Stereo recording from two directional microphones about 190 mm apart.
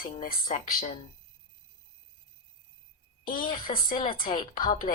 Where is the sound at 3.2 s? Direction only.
45° left (ahead or behind).